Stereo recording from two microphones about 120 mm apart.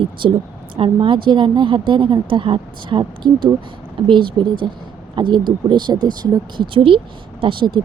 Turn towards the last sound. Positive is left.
turn(degrees=-40)  # may be behind; listen again after turning